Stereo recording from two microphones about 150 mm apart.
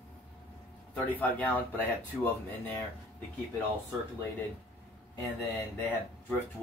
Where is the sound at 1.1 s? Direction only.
10° left (ahead or behind).